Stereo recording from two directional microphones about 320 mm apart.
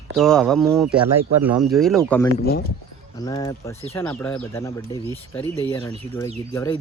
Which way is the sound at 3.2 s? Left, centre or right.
Centre.